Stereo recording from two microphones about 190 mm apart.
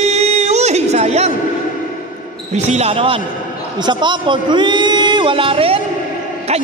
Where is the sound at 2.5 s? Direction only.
35° right (ahead or behind).